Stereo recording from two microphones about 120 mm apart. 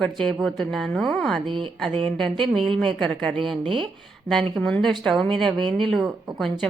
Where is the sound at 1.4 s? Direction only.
40° right (ahead or behind).